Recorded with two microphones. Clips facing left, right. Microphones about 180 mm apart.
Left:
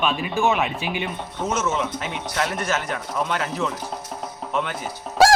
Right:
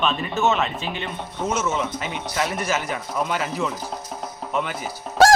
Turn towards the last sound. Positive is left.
turn(degrees=0)  # may be behind; listen again after turning